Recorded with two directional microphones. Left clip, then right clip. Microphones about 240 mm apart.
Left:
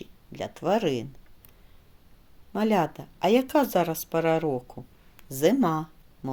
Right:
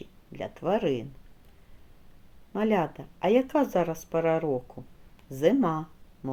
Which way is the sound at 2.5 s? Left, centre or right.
Left.